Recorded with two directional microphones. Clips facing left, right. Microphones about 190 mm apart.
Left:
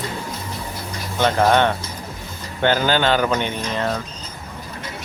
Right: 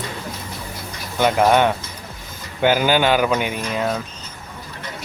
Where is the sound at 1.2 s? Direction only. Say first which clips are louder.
Right 1 dB; 10° right (ahead or behind).